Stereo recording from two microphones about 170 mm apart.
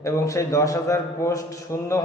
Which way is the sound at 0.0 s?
20° left (ahead or behind).